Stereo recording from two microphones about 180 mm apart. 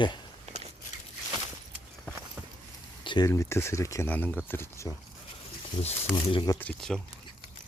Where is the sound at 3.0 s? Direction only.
25° left (ahead or behind).